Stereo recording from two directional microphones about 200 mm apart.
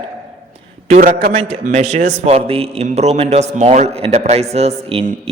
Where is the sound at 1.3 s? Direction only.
30° right (ahead or behind).